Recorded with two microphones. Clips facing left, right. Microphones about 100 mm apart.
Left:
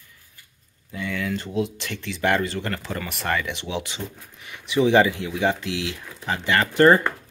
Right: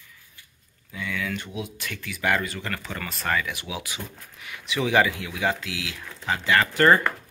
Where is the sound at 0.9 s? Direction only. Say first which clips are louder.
Left 3 dB; 35° left (ahead or behind).